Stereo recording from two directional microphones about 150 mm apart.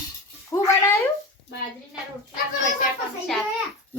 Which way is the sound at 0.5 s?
20° left (ahead or behind).